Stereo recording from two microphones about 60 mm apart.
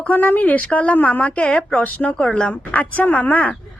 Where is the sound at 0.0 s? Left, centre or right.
Left.